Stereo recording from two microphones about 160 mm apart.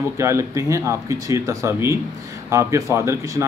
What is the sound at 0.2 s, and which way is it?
A man's voice, 20° right (ahead or behind).